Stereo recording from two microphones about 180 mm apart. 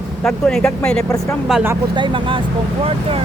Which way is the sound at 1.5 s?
10° right (ahead or behind).